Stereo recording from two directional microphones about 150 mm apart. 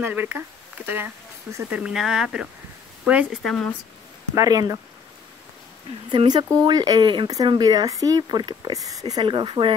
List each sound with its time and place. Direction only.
0.0 s speech: 15° right (ahead or behind)
1.8 s speech: 5° right (ahead or behind)
3.4 s speech: 5° left (ahead or behind)
4.4 s speech: 25° right (ahead or behind)
6.1 s speech: 30° right (ahead or behind)